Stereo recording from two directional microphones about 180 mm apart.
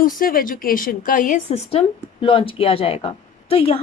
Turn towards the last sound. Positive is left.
turn(degrees=30)  # may be behind; listen again after turning